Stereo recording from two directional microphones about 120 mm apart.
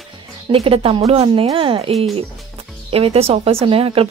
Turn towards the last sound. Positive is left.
turn(degrees=-50)  # may be behind; listen again after turning